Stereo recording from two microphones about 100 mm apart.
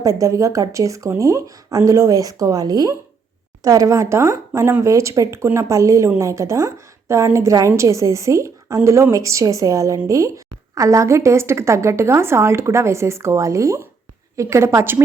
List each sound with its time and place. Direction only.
0.0 s a woman's voice: 30° right (ahead or behind)